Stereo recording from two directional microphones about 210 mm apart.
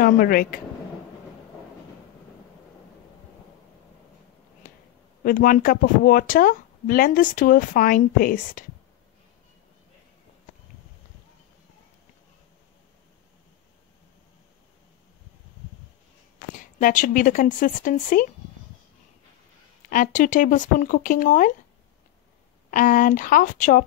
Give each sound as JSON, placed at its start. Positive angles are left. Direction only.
{"t": 0.0, "sound": "speech", "side_deg": 45}
{"t": 5.2, "sound": "speech", "side_deg": 40}
{"t": 16.5, "sound": "speech", "side_deg": 40}
{"t": 19.9, "sound": "speech", "side_deg": 40}
{"t": 22.7, "sound": "speech", "side_deg": 40}